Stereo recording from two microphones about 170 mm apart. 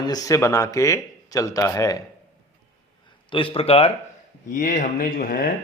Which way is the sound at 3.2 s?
30° left (ahead or behind).